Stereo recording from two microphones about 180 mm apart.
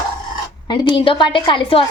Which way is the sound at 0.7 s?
25° left (ahead or behind).